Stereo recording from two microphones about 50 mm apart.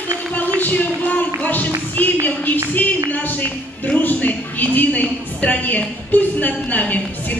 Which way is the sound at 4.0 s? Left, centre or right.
Left.